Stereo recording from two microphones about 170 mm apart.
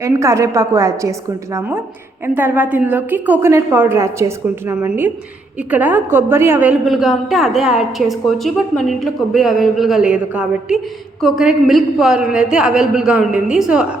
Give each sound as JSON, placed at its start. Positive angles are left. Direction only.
{"t": 0.0, "sound": "a woman's voice", "side_deg": -15}